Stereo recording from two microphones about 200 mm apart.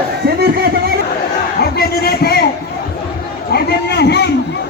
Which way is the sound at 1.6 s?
50° left (ahead or behind).